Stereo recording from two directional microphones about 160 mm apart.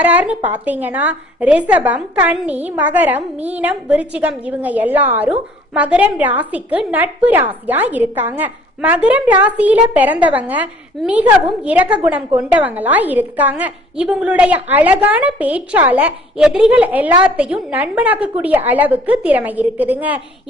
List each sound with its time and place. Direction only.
0.0 s a woman's voice: 10° right (ahead or behind)